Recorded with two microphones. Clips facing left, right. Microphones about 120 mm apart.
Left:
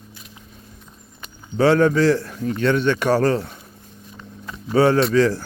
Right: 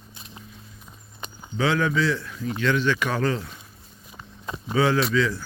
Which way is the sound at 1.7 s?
40° left (ahead or behind).